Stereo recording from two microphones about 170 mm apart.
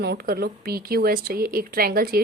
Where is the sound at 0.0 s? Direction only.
65° right (ahead or behind).